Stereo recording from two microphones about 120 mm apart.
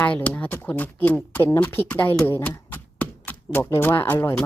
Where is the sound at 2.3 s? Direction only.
20° left (ahead or behind).